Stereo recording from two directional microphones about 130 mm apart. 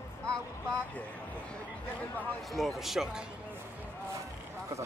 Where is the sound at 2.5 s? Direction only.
Centre (ahead or behind).